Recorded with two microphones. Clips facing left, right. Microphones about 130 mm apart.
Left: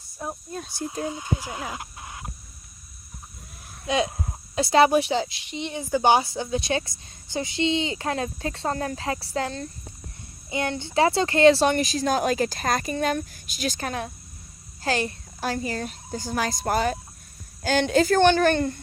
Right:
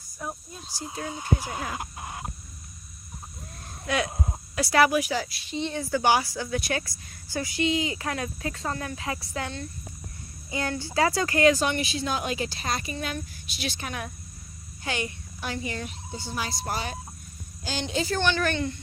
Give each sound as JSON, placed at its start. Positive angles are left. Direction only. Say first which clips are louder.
{"t": 0.2, "sound": "speech", "louder": "left 2 dB", "side_deg": 30}
{"t": 1.1, "sound": "speech", "louder": "right 1 dB", "side_deg": -15}
{"t": 1.8, "sound": "a sound", "louder": "right 3 dB", "side_deg": -25}
{"t": 3.8, "sound": "speech", "louder": "left 3 dB", "side_deg": 20}
{"t": 10.5, "sound": "a woman's voice", "louder": "left 3 dB", "side_deg": 25}